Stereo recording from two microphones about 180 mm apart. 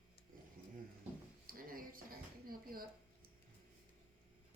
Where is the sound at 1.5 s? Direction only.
50° right (ahead or behind).